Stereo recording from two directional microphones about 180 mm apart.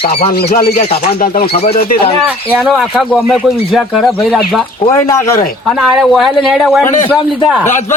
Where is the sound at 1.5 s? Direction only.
35° left (ahead or behind).